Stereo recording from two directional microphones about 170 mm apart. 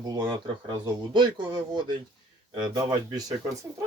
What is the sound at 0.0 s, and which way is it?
Speech, 25° right (ahead or behind).